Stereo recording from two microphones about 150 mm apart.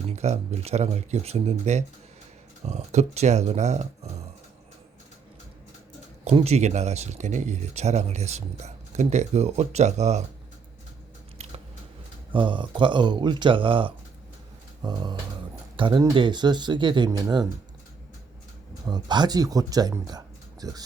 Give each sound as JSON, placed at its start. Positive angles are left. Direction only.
{"t": 0.2, "sound": "speech", "side_deg": -45}
{"t": 6.2, "sound": "speech", "side_deg": -45}
{"t": 12.3, "sound": "speech", "side_deg": -35}
{"t": 18.9, "sound": "speech", "side_deg": -30}